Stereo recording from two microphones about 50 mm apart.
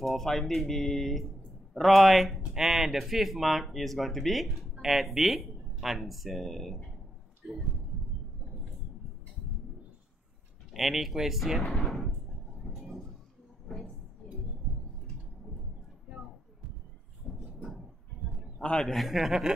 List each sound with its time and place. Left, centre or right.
0.0 s speech: centre
10.7 s speech: centre
13.7 s a sound: centre
17.3 s a sound: centre
18.8 s a man's voice: centre
19.0 s speech: centre